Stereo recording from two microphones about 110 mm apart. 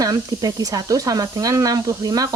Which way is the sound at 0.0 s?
35° right (ahead or behind).